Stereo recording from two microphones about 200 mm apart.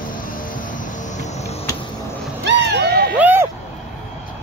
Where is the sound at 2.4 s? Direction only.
55° right (ahead or behind).